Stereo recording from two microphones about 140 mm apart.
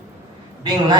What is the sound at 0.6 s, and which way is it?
Speech, 30° right (ahead or behind).